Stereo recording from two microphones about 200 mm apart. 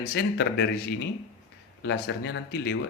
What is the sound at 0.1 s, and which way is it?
Speech, 55° left (ahead or behind).